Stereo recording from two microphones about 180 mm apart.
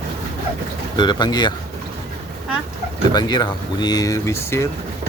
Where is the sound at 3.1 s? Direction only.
25° left (ahead or behind).